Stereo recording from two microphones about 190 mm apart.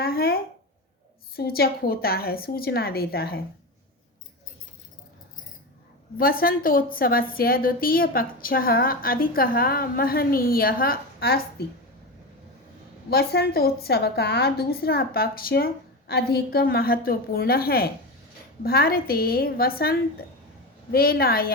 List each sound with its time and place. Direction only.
0.0 s a sound: 55° left (ahead or behind)
1.4 s a woman's voice: 55° left (ahead or behind)
6.1 s a woman's voice: 50° left (ahead or behind)
13.1 s a woman's voice: 55° left (ahead or behind)